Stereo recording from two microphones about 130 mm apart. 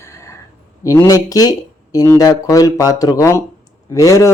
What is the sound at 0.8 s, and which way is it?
Speech, 25° left (ahead or behind).